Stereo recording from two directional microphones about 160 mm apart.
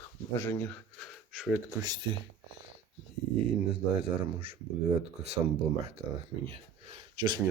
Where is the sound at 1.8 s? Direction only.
25° right (ahead or behind).